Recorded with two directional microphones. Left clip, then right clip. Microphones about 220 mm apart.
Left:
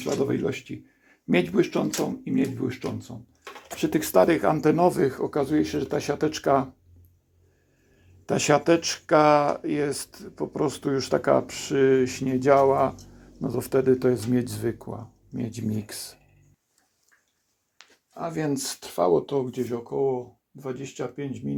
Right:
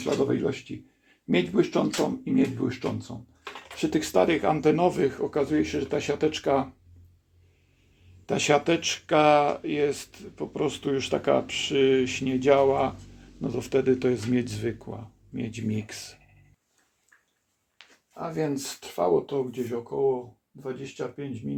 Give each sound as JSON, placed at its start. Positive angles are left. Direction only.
{"t": 0.0, "sound": "speech", "side_deg": 15}
{"t": 8.3, "sound": "speech", "side_deg": 25}
{"t": 17.7, "sound": "speech", "side_deg": 35}